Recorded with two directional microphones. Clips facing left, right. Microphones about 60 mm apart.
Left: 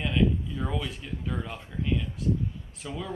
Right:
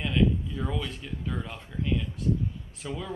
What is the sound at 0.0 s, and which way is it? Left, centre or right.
Speech, centre.